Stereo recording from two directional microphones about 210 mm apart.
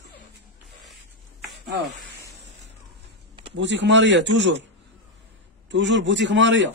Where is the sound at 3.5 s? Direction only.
60° right (ahead or behind).